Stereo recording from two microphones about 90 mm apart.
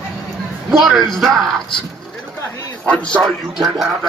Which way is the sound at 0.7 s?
Centre (ahead or behind).